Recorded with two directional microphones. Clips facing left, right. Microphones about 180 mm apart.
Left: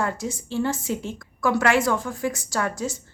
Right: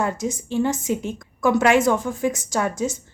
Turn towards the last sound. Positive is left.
turn(degrees=-20)  # may be behind; listen again after turning